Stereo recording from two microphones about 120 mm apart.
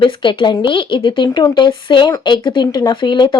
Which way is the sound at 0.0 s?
45° left (ahead or behind).